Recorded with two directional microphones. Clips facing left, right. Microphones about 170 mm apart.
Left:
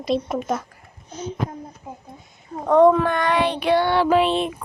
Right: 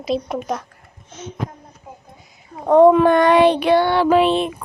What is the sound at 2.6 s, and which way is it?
Speech, 15° right (ahead or behind).